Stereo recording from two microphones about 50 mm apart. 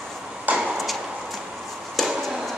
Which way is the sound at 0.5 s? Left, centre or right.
Right.